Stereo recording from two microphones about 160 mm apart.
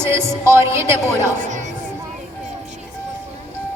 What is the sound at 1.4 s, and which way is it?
Chatter, 50° right (ahead or behind).